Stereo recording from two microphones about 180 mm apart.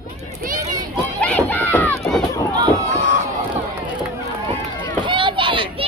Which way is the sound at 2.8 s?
40° right (ahead or behind).